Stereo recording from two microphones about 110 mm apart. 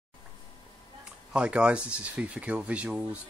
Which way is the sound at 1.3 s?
10° right (ahead or behind).